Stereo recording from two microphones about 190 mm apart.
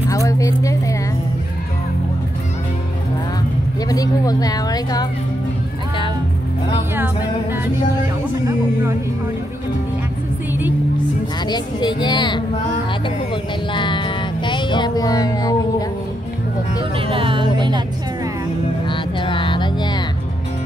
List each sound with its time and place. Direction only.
0.1 s a sound: 15° left (ahead or behind)
3.9 s a sound: 20° left (ahead or behind)
11.4 s speech: 25° left (ahead or behind)
13.3 s music: 25° left (ahead or behind)
16.9 s music: 25° right (ahead or behind)
18.9 s music: 25° left (ahead or behind)